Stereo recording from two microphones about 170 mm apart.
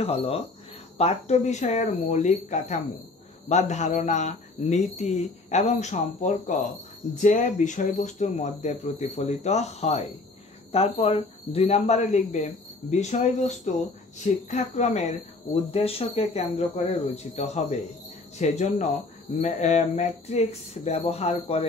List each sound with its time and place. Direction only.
0.0 s speech: 35° left (ahead or behind)